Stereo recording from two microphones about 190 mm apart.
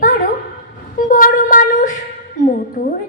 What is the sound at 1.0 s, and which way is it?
A woman's voice, 45° left (ahead or behind).